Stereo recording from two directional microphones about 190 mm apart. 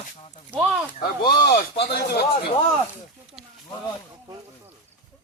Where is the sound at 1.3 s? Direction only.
55° left (ahead or behind).